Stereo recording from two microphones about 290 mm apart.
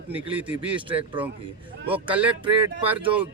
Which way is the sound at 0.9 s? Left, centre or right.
Centre.